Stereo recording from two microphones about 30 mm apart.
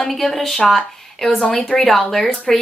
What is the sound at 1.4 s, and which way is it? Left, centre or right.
Speech, left.